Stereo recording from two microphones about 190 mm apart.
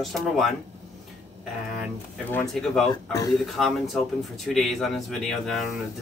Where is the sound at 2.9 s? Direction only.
20° left (ahead or behind).